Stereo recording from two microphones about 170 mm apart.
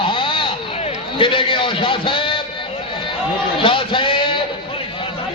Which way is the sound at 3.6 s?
30° left (ahead or behind).